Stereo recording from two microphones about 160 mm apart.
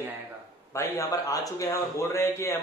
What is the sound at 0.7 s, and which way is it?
A man's voice, 20° left (ahead or behind).